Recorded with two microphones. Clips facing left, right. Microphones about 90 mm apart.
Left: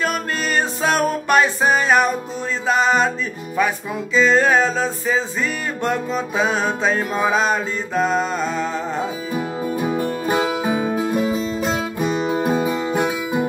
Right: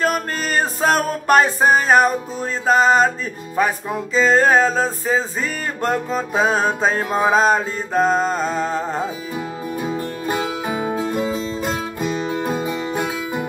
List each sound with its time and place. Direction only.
0.0 s music: 40° right (ahead or behind)
9.8 s music: 15° left (ahead or behind)
12.4 s music: 10° left (ahead or behind)